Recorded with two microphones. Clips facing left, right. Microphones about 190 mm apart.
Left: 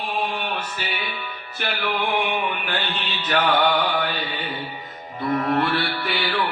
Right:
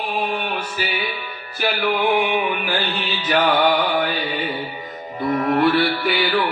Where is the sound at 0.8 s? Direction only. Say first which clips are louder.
Right 5 dB; 5° right (ahead or behind).